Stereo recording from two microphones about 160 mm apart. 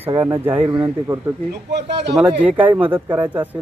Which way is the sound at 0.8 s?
15° right (ahead or behind).